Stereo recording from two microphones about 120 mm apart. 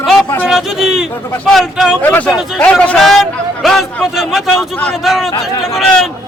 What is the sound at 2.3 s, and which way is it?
Speech, centre (ahead or behind).